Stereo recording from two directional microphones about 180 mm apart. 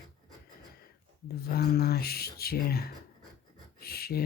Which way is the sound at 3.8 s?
60° left (ahead or behind).